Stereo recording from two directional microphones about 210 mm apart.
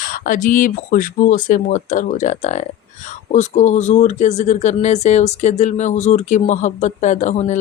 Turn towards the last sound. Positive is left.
turn(degrees=35)  # may be behind; listen again after turning